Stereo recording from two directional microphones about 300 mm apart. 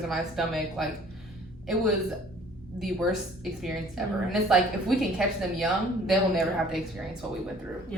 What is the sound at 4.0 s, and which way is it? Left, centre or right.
A woman's voice, centre.